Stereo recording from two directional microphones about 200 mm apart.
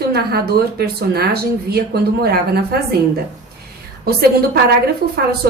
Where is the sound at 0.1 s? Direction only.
50° right (ahead or behind).